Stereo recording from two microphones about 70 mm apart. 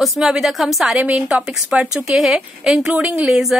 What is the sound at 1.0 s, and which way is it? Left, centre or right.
A woman's voice, centre.